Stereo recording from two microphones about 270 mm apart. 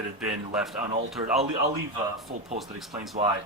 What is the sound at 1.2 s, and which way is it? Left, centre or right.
Speech, right.